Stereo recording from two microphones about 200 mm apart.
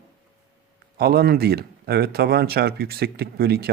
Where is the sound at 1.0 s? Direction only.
50° right (ahead or behind).